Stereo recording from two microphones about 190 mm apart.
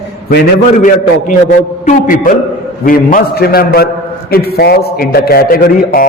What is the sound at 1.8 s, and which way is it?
A man's voice, 45° left (ahead or behind).